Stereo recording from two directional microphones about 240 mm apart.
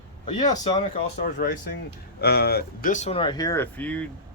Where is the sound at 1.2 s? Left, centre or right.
Left.